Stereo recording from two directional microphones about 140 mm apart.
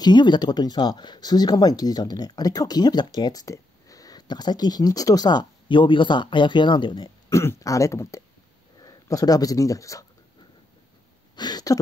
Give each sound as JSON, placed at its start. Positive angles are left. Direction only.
{"t": 0.0, "sound": "speech", "side_deg": 30}
{"t": 7.2, "sound": "speech", "side_deg": 20}
{"t": 11.3, "sound": "a sound", "side_deg": 30}